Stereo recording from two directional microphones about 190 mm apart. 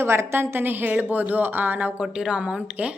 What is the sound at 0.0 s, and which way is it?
A woman's voice, 15° right (ahead or behind).